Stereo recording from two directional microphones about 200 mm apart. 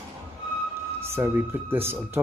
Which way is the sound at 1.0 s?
10° right (ahead or behind).